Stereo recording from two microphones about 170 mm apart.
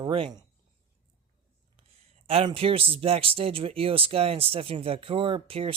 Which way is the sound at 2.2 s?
35° right (ahead or behind).